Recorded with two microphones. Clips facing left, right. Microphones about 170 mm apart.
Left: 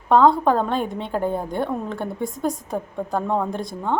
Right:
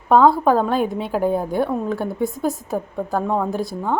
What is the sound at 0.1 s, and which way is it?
A woman's voice, 5° right (ahead or behind).